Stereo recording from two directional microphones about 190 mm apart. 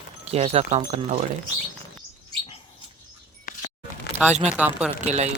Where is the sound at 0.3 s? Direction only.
35° right (ahead or behind).